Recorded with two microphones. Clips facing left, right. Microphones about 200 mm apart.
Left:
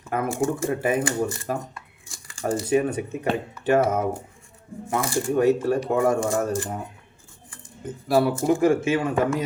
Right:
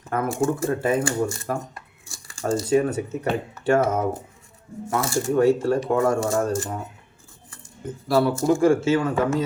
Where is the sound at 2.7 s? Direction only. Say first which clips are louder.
Right 1 dB; 20° left (ahead or behind).